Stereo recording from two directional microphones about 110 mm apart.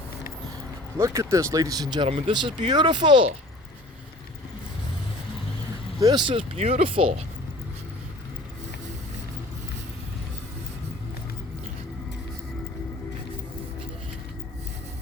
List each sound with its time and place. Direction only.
0.9 s speech: 25° right (ahead or behind)
2.0 s speech: 50° right (ahead or behind)
6.0 s speech: 35° right (ahead or behind)
6.6 s speech: 75° right (ahead or behind); by 7.1 s 55° right (ahead or behind)